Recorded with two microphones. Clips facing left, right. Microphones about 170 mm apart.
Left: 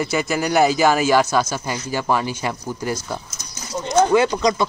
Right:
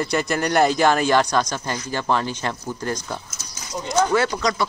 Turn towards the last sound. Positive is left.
turn(degrees=20)  # may be behind; listen again after turning